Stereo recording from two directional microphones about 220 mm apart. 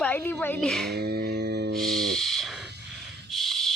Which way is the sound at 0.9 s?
45° right (ahead or behind).